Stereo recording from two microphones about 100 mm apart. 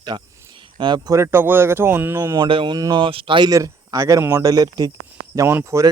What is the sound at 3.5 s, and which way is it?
Speech, 35° right (ahead or behind).